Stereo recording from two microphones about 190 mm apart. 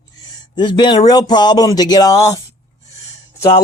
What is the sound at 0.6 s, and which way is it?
Speech, 25° left (ahead or behind).